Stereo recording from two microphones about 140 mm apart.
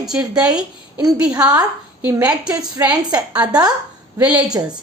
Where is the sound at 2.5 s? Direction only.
30° right (ahead or behind).